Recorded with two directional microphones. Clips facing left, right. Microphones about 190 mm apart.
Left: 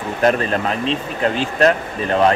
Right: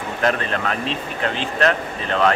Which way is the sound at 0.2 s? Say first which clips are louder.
Left 5 dB; 35° left (ahead or behind).